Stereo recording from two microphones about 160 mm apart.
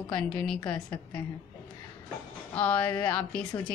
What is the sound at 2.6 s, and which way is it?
Speech, 10° left (ahead or behind).